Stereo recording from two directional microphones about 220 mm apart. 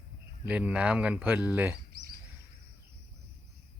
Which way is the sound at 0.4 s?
5° right (ahead or behind).